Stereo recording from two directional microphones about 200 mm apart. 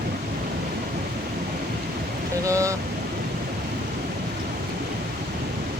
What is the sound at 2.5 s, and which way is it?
Speech, 15° right (ahead or behind).